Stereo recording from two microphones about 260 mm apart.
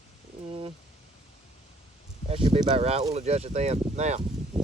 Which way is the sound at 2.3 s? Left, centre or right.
Right.